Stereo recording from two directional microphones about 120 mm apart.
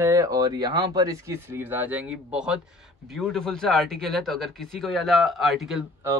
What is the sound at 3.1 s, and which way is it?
Speech, 5° left (ahead or behind).